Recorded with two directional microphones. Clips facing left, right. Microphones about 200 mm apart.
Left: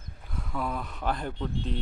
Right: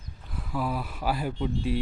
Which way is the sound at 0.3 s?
5° right (ahead or behind).